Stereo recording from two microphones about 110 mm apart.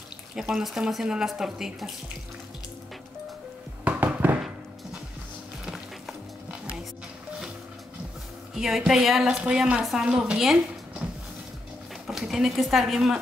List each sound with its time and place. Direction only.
0.4 s a woman's voice: 5° right (ahead or behind)
3.8 s a sound: 15° right (ahead or behind)
8.5 s a woman's voice: 5° right (ahead or behind)
12.1 s speech: 5° right (ahead or behind)